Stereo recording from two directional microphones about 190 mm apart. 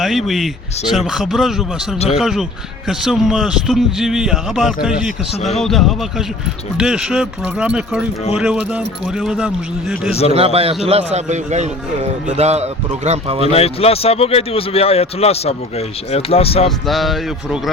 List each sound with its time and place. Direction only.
0.0 s a man's voice: centre (ahead or behind)
10.1 s a man's voice: 30° left (ahead or behind)
10.3 s a man's voice: 30° right (ahead or behind)
13.5 s a man's voice: 30° left (ahead or behind)
16.6 s a man's voice: centre (ahead or behind)